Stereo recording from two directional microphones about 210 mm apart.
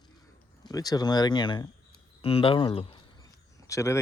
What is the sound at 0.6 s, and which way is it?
Speech, 20° left (ahead or behind).